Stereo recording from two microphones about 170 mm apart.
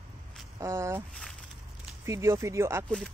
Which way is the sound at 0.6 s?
15° right (ahead or behind).